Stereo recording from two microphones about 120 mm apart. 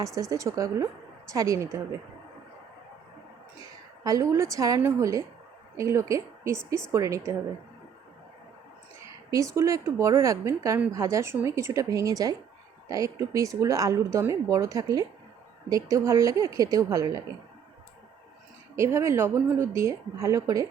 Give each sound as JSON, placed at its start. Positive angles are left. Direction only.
{"t": 0.2, "sound": "speech", "side_deg": -25}
{"t": 4.0, "sound": "a woman's voice", "side_deg": -30}
{"t": 9.3, "sound": "speech", "side_deg": -25}
{"t": 18.8, "sound": "speech", "side_deg": -25}